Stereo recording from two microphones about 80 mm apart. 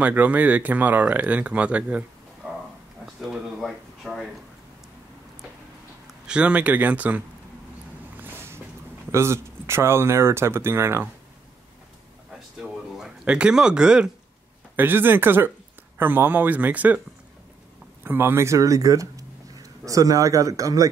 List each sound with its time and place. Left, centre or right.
0.0 s speech: centre
3.2 s speech: centre
6.0 s a man's voice: centre
9.1 s speech: right
12.5 s a sound: centre
14.8 s speech: right
18.0 s speech: right